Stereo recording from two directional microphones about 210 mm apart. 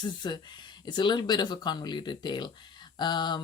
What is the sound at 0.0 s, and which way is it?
Speech, 20° left (ahead or behind).